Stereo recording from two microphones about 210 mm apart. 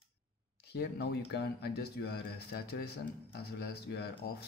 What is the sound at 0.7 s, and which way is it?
Speech, 50° left (ahead or behind).